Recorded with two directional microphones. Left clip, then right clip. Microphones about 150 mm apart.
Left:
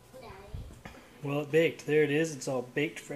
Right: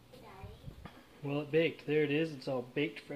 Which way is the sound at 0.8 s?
Centre (ahead or behind).